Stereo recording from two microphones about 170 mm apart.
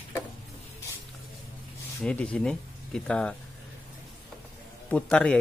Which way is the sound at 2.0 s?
5° left (ahead or behind).